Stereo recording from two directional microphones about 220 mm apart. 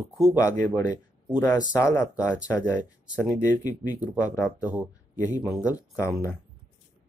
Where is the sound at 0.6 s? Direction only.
15° left (ahead or behind).